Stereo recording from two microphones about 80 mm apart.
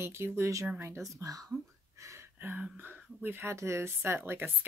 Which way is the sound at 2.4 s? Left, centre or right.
Right.